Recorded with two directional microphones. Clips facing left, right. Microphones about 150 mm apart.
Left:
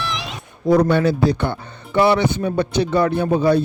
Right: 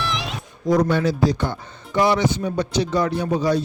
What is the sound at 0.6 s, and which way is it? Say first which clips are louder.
Speech: left 3 dB; 60° left (ahead or behind).